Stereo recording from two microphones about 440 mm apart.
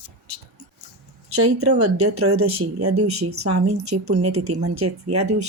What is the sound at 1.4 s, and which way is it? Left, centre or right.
Speech, right.